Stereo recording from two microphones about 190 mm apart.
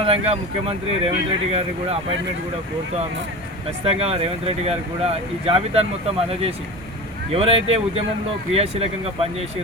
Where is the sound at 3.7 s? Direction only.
30° right (ahead or behind).